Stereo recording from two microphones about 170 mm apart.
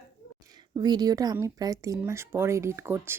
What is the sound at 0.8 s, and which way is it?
Speech, 25° right (ahead or behind).